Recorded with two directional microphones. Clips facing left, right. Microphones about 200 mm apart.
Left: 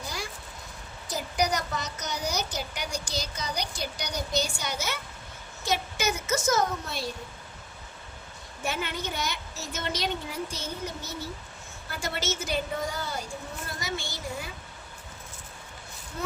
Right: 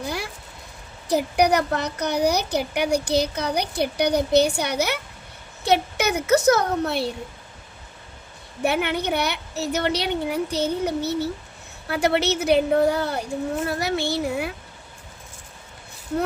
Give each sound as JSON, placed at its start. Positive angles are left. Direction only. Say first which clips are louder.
{"t": 0.0, "sound": "vehicle", "louder": "right 8 dB", "side_deg": -60}
{"t": 1.0, "sound": "speech", "louder": "right 9 dB", "side_deg": -60}
{"t": 8.6, "sound": "speech", "louder": "right 10 dB", "side_deg": -65}